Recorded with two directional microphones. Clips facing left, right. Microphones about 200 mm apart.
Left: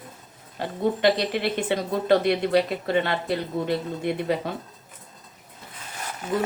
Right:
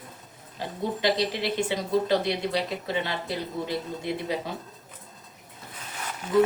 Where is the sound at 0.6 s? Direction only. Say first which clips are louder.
Left 4 dB; 60° left (ahead or behind).